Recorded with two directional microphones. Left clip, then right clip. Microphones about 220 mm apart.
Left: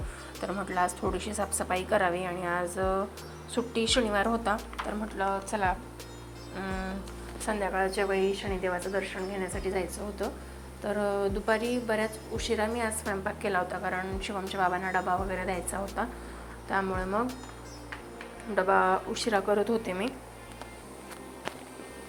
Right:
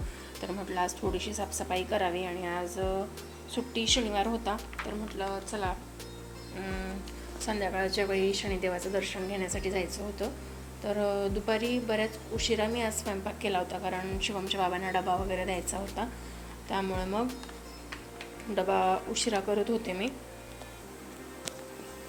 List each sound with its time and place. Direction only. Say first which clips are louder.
0.3 s a woman's voice: left 3 dB; centre (ahead or behind)
6.6 s a woman's voice: left 3 dB; centre (ahead or behind)
16.7 s a woman's voice: left 3 dB; 10° right (ahead or behind)
18.5 s a woman's voice: left 3 dB; 5° right (ahead or behind)